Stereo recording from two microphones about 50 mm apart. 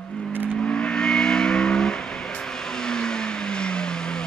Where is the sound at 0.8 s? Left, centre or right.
Centre.